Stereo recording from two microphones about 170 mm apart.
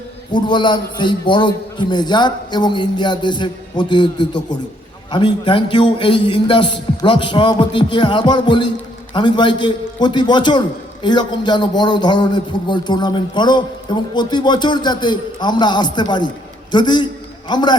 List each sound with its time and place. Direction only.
0.3 s a man's voice: 25° left (ahead or behind)